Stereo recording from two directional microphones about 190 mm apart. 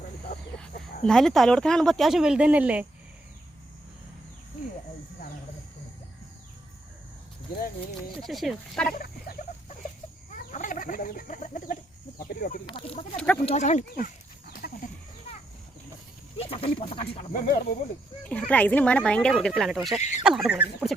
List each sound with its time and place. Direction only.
1.0 s speech: centre (ahead or behind)
8.2 s speech: centre (ahead or behind)
8.9 s wild animals: 50° left (ahead or behind)
10.5 s chicken: 40° left (ahead or behind)
12.3 s speech: 45° left (ahead or behind)
12.6 s speech: 30° left (ahead or behind)
13.1 s speech: 5° left (ahead or behind)
13.4 s speech: 35° left (ahead or behind)
16.4 s speech: 30° left (ahead or behind)
17.3 s speech: 45° left (ahead or behind)
18.2 s speech: 5° left (ahead or behind)